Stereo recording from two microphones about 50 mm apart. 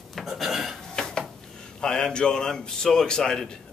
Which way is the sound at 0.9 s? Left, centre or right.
Centre.